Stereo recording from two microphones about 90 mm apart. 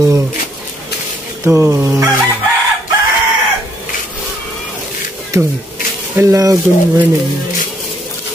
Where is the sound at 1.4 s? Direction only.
30° right (ahead or behind).